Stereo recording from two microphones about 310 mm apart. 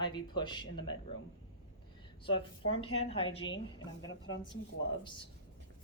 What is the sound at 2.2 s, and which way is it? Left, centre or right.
Speech, centre.